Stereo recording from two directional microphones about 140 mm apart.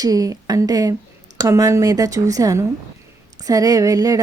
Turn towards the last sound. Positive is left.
turn(degrees=-25)  # may be behind; listen again after turning